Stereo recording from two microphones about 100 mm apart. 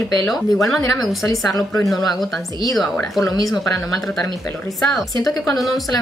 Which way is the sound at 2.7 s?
Centre (ahead or behind).